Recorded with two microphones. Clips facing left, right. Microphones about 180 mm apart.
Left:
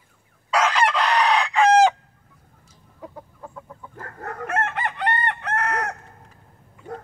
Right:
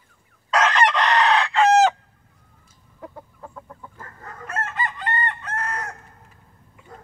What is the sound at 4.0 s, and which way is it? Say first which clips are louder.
Chicken: left 10 dB; 65° left (ahead or behind).